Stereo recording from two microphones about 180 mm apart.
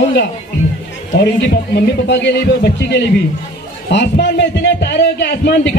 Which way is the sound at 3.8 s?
70° left (ahead or behind).